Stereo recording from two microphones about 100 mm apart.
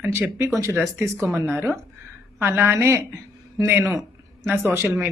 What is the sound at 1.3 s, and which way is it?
A woman's voice, 25° right (ahead or behind).